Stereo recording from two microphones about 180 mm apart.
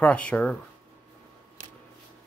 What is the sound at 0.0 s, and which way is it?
Speech, 5° left (ahead or behind).